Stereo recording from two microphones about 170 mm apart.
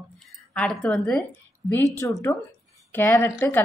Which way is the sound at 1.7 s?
15° left (ahead or behind).